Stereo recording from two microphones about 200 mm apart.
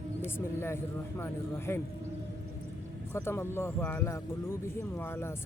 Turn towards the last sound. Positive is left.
turn(degrees=10)  # may be behind; listen again after turning